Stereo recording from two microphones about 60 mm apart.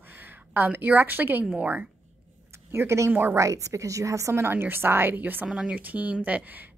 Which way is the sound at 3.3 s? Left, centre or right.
Right.